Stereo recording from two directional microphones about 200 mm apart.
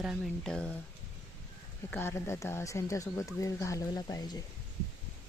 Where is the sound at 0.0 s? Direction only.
Centre (ahead or behind).